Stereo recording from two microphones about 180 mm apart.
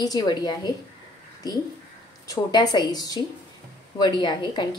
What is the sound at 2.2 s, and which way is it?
A woman's voice, 20° left (ahead or behind).